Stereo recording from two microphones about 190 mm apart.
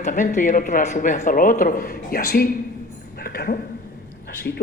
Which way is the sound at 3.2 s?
50° left (ahead or behind).